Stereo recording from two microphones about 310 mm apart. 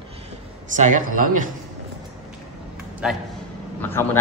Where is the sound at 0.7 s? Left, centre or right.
Right.